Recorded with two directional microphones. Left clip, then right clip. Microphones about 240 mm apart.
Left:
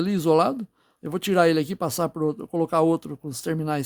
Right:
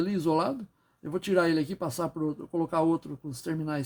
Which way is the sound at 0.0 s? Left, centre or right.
Left.